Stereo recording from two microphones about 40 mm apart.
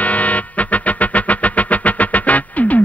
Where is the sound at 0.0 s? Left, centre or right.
Left.